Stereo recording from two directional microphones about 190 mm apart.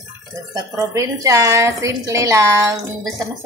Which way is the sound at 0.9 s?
15° right (ahead or behind).